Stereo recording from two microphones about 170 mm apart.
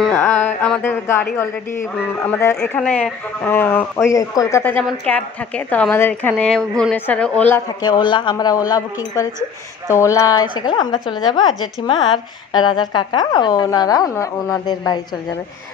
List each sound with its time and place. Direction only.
0.1 s speech: 10° left (ahead or behind)
7.6 s a woman's voice: 25° left (ahead or behind)
9.8 s a woman's voice: 15° left (ahead or behind)